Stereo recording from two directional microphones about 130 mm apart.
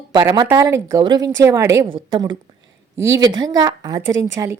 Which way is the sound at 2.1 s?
35° right (ahead or behind).